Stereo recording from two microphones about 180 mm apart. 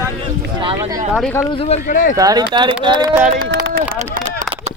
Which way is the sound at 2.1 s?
20° right (ahead or behind).